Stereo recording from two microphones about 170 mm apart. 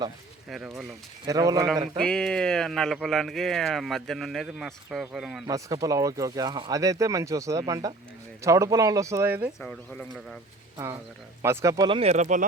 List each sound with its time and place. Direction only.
0.5 s speech: centre (ahead or behind)
1.3 s speech: 20° right (ahead or behind)
2.0 s speech: 5° left (ahead or behind)
5.5 s speech: 20° right (ahead or behind)
9.6 s speech: 5° left (ahead or behind)
11.4 s speech: 20° right (ahead or behind)
11.9 s speech: 35° right (ahead or behind)